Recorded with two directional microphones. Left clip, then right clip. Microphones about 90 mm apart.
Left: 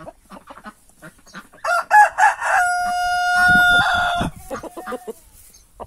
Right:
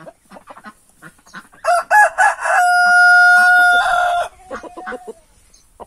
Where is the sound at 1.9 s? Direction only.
70° right (ahead or behind).